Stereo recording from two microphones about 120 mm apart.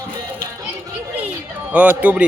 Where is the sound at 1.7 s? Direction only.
10° right (ahead or behind).